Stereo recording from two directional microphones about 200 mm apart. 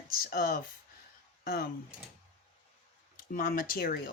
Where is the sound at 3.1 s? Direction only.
40° left (ahead or behind).